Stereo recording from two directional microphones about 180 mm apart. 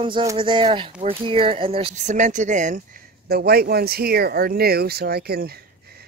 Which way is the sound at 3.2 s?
60° right (ahead or behind).